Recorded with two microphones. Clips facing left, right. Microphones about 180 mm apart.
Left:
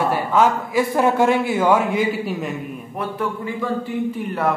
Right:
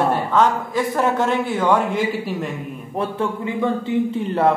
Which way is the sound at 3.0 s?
25° right (ahead or behind).